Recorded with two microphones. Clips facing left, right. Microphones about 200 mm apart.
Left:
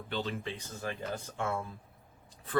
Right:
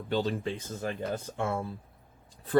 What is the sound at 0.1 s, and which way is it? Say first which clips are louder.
Speech: right 7 dB; 40° right (ahead or behind).